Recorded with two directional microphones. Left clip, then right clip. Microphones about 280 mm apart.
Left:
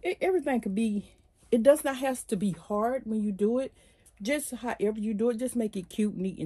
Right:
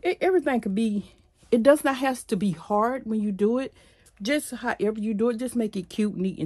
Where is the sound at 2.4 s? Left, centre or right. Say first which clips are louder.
Right 4 dB; centre.